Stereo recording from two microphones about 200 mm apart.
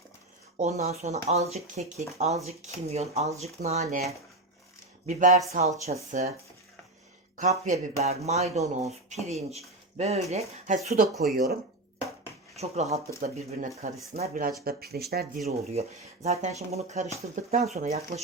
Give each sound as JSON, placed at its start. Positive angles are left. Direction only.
{"t": 0.6, "sound": "speech", "side_deg": -35}
{"t": 7.3, "sound": "speech", "side_deg": -35}
{"t": 10.7, "sound": "speech", "side_deg": -45}
{"t": 12.5, "sound": "speech", "side_deg": -35}
{"t": 15.4, "sound": "speech", "side_deg": -30}